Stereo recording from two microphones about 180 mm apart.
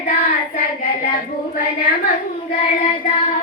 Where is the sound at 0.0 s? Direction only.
50° left (ahead or behind).